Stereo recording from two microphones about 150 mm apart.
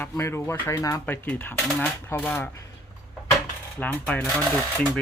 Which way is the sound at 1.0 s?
10° left (ahead or behind).